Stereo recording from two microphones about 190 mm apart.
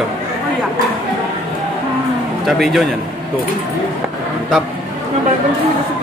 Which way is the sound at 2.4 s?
Centre (ahead or behind).